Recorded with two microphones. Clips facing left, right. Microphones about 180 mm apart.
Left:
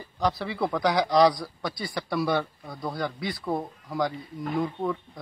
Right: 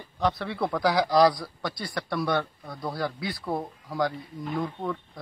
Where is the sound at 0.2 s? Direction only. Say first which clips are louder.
Even; centre (ahead or behind).